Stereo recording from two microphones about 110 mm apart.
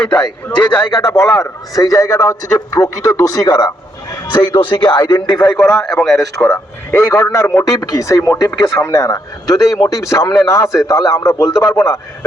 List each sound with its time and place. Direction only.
0.0 s a man's voice: 10° left (ahead or behind)
0.5 s a man's voice: 45° left (ahead or behind)
4.3 s speech: 45° left (ahead or behind)
5.5 s a man's voice: 5° left (ahead or behind)
6.4 s a man's voice: 20° left (ahead or behind)